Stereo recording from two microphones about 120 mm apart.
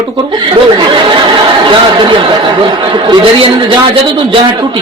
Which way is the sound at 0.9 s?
40° right (ahead or behind).